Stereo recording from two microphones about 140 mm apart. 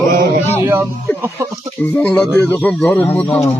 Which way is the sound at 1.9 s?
10° left (ahead or behind).